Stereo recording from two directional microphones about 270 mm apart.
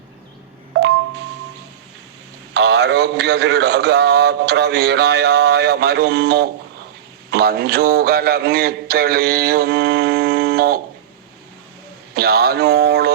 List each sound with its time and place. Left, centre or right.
2.5 s a man's voice: right
12.1 s a man's voice: right